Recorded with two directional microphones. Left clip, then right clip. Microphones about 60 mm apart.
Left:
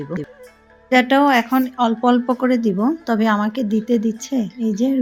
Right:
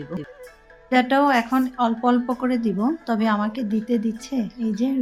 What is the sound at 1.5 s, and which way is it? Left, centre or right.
Speech, left.